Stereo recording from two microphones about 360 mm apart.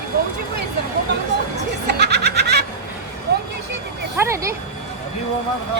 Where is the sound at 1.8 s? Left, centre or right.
Right.